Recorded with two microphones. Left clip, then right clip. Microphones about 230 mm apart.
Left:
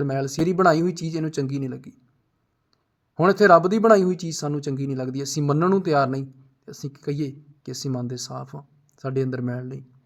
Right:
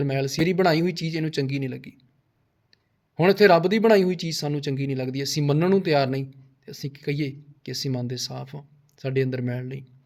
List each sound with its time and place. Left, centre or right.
0.1 s speech: centre
3.2 s speech: centre